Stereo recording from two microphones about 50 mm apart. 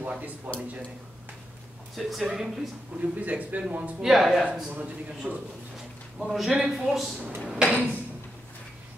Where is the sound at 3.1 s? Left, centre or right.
Right.